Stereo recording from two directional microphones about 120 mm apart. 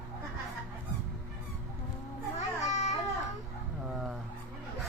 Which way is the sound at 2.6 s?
75° left (ahead or behind).